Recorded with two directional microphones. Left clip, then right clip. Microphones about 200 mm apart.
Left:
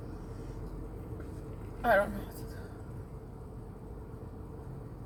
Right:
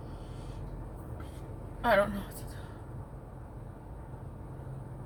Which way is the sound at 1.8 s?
35° right (ahead or behind).